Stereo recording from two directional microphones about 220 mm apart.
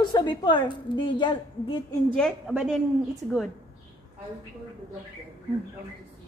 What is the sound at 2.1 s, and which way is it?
Speech, centre (ahead or behind).